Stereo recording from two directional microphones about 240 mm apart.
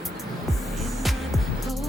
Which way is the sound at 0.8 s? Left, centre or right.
Centre.